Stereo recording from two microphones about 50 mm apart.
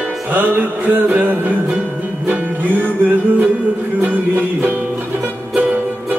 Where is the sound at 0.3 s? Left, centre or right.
Right.